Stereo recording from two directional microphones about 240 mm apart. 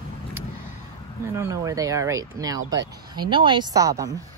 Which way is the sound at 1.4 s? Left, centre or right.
Centre.